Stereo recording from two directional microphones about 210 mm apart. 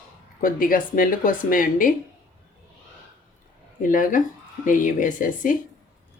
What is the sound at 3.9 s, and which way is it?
Speech, 40° left (ahead or behind).